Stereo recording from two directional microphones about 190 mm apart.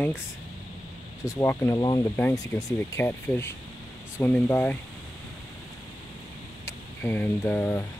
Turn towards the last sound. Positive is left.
turn(degrees=10)  # may be behind; listen again after turning